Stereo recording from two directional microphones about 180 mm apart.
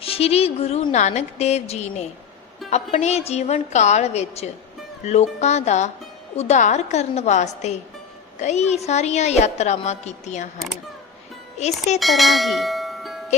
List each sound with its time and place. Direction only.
0.0 s a woman's voice: 30° left (ahead or behind)
11.5 s speech: 40° left (ahead or behind)
11.9 s speech: centre (ahead or behind)